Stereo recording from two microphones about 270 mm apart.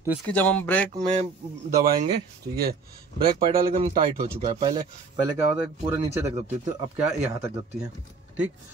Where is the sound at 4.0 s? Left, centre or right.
Right.